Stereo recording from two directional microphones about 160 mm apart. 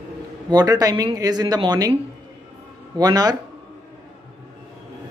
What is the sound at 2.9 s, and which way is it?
Speech, 25° right (ahead or behind).